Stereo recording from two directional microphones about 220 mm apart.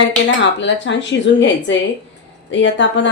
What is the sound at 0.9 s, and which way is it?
Speech, 55° left (ahead or behind).